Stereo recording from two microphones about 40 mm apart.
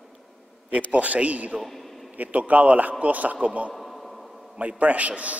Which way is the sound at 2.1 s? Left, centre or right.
Right.